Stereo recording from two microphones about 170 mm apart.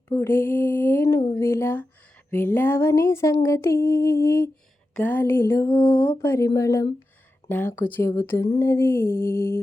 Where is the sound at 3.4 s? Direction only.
15° left (ahead or behind).